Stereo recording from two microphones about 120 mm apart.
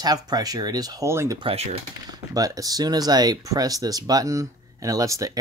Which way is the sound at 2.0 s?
30° right (ahead or behind).